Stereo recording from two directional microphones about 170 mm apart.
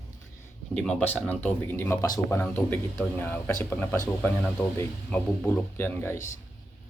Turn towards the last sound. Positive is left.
turn(degrees=15)  # may be behind; listen again after turning